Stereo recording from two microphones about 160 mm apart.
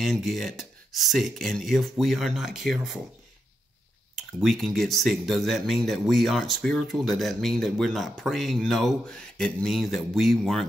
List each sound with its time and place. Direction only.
0.0 s speech: centre (ahead or behind)
4.1 s speech: centre (ahead or behind)